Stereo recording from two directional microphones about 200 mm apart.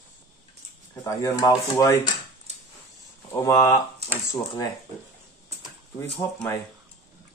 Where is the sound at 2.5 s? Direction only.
35° right (ahead or behind).